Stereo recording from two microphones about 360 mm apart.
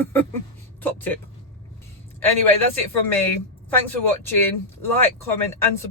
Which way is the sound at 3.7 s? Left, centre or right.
Centre.